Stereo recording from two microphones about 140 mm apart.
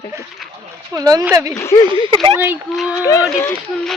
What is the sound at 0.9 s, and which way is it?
Speech, 25° right (ahead or behind).